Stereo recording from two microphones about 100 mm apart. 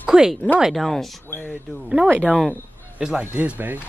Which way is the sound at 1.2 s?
20° left (ahead or behind).